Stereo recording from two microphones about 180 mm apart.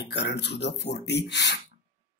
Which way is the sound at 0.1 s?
70° left (ahead or behind).